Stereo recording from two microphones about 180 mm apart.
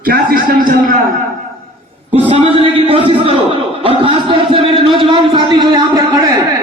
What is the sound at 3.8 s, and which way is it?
A man's voice, 30° right (ahead or behind).